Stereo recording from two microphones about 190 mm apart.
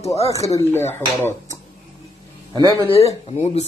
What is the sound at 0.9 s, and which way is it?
Speech, 10° left (ahead or behind).